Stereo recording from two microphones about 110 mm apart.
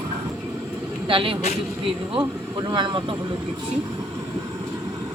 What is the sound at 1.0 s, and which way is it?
Speech, 55° right (ahead or behind).